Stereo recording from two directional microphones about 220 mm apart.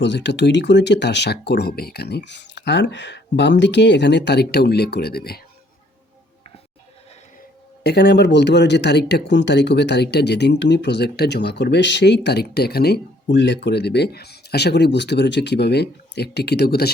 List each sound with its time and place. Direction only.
0.0 s speech: 50° left (ahead or behind)
7.9 s speech: 50° left (ahead or behind)